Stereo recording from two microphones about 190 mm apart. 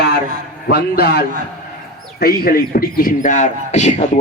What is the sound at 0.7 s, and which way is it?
A man's voice, 55° left (ahead or behind).